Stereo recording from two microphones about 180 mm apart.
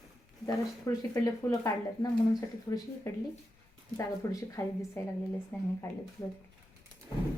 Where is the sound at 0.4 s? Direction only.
20° left (ahead or behind).